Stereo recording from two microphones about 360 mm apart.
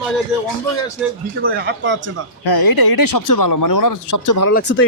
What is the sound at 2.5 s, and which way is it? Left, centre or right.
Speech, left.